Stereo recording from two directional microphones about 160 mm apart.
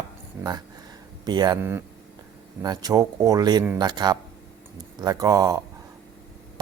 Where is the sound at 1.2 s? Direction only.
25° right (ahead or behind).